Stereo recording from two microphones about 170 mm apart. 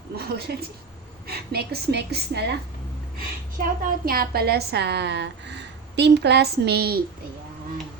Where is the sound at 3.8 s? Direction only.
60° right (ahead or behind).